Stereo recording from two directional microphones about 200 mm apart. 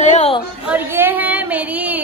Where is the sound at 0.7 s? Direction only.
10° right (ahead or behind).